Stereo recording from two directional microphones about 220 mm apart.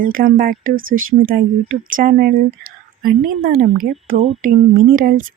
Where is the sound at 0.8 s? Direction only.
65° right (ahead or behind).